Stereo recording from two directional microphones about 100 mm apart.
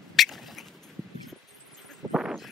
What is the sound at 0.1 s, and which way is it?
Rodents, centre (ahead or behind).